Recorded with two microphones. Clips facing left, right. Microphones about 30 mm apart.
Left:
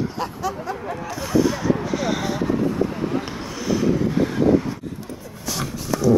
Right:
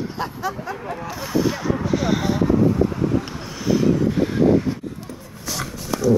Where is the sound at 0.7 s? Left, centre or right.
Centre.